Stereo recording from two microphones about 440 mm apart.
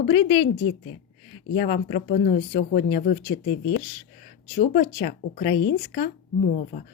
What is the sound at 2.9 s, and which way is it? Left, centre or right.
Speech, centre.